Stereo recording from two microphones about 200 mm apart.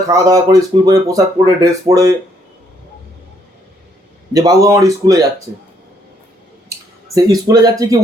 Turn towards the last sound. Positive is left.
turn(degrees=-15)  # may be behind; listen again after turning